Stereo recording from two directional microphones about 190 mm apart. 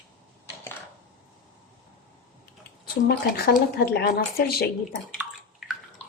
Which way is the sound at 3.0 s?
55° left (ahead or behind).